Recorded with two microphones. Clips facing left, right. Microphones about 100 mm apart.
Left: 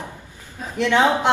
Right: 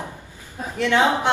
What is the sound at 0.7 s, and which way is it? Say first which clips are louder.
Speech: left 1 dB; 20° left (ahead or behind).